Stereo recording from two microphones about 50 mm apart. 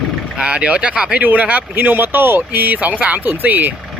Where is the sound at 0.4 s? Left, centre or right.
Right.